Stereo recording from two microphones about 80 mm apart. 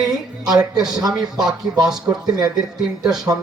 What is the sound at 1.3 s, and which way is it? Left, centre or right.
Speech, right.